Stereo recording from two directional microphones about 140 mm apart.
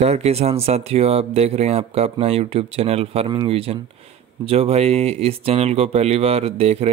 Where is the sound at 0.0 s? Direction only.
50° right (ahead or behind).